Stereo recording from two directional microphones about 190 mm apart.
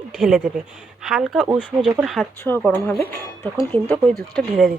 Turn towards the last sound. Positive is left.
turn(degrees=0)  # may be behind; listen again after turning